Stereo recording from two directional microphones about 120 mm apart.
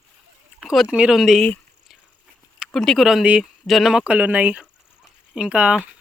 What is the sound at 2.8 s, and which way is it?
Speech, centre (ahead or behind).